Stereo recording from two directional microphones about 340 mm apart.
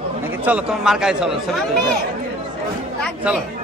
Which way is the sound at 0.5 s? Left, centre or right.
Centre.